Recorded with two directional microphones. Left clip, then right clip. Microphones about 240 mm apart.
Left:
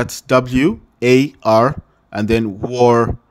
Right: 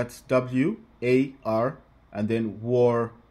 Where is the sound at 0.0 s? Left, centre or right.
Left.